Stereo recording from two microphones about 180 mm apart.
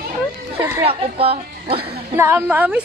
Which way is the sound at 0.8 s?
30° right (ahead or behind).